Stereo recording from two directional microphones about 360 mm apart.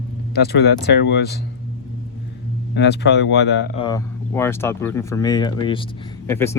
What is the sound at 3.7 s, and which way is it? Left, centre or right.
Speech, centre.